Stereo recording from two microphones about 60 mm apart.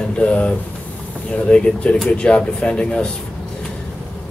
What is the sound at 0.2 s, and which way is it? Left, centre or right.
Speech, left.